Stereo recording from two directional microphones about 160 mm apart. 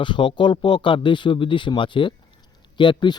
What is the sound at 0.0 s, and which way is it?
A man's voice, 30° left (ahead or behind).